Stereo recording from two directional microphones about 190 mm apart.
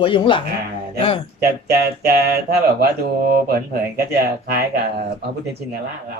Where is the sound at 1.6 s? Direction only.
55° right (ahead or behind).